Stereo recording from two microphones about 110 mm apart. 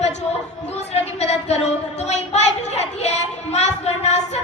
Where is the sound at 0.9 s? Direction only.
80° left.